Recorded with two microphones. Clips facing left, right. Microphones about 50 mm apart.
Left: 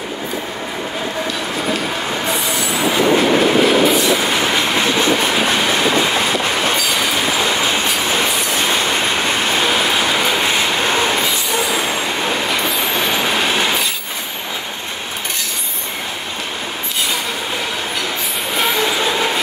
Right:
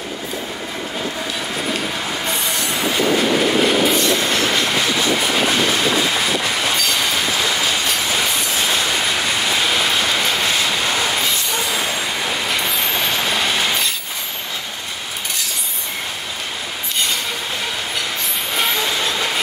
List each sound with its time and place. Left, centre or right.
3.6 s train: centre
4.3 s train: centre
4.9 s train: left
6.8 s train: centre
7.3 s train: left
9.7 s train: centre; by 11.1 s left
12.4 s train: centre
18.6 s train: centre
19.0 s train: centre